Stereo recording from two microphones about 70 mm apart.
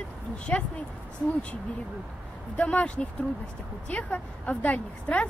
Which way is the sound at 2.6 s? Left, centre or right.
Centre.